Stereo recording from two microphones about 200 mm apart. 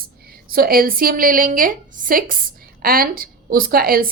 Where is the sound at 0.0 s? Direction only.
45° right (ahead or behind).